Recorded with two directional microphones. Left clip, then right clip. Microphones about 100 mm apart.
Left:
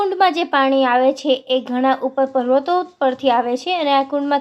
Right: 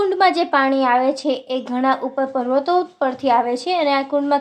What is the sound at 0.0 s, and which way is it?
A woman's voice, 20° left (ahead or behind).